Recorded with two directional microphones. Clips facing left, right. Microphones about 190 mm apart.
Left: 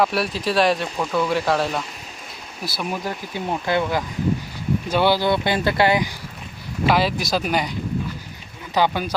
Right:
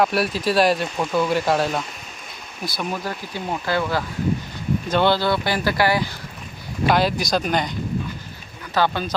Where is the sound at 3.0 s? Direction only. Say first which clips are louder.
Left 1 dB; 20° left (ahead or behind).